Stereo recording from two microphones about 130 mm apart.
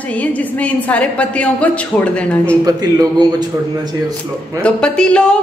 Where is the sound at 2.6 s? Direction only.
30° right (ahead or behind).